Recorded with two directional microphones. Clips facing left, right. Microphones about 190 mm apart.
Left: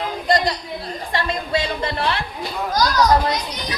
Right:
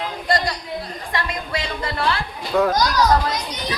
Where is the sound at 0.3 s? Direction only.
20° left (ahead or behind).